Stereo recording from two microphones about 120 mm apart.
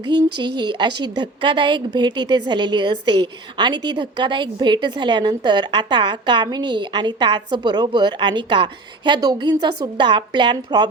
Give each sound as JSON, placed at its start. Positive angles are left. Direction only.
{"t": 0.1, "sound": "a woman's voice", "side_deg": -40}